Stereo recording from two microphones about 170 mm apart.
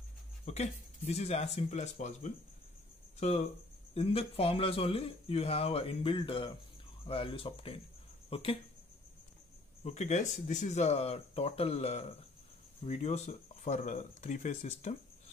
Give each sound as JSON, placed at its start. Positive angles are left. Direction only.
{"t": 0.5, "sound": "speech", "side_deg": 40}
{"t": 9.8, "sound": "speech", "side_deg": 45}